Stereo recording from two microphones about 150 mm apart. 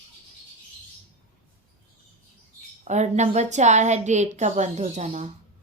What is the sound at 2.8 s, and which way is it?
Speech, 50° right (ahead or behind).